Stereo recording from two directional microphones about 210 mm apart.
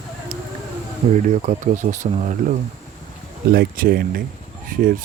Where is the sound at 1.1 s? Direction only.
35° right (ahead or behind).